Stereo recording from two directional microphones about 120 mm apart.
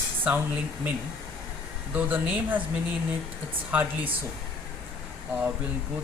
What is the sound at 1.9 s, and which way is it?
Speech, 15° right (ahead or behind).